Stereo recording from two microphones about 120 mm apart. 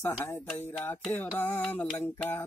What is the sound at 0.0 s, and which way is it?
Mantra, 20° left (ahead or behind).